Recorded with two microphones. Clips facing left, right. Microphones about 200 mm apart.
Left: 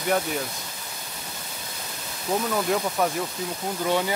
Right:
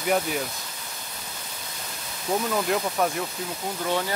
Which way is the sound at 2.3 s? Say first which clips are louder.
Even; 5° right (ahead or behind).